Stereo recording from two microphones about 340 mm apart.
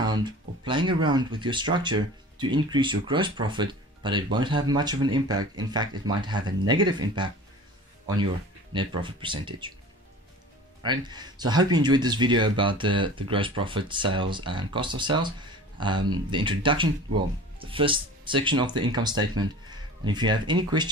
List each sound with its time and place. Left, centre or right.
0.0 s speech: centre
8.7 s speech: centre
10.8 s speech: centre